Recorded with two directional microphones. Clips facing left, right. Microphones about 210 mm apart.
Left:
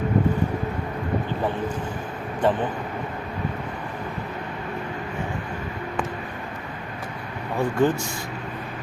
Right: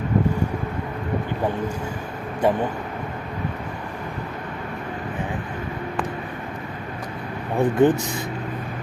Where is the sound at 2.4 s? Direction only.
10° right (ahead or behind).